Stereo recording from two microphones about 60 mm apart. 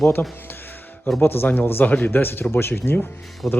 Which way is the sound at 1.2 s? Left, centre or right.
Left.